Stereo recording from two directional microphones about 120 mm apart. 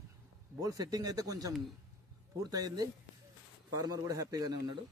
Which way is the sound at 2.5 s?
30° right (ahead or behind).